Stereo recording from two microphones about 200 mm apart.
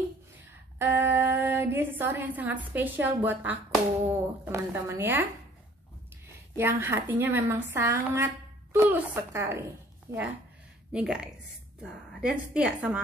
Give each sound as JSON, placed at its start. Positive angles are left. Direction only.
{"t": 0.7, "sound": "a woman's voice", "side_deg": -10}
{"t": 6.5, "sound": "a woman's voice", "side_deg": -10}